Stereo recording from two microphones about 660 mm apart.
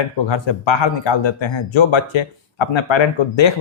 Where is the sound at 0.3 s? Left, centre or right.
Left.